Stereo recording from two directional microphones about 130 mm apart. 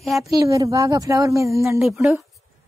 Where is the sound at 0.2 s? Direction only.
25° right (ahead or behind).